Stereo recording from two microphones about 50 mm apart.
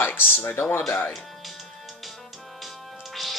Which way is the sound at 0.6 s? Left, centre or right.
Left.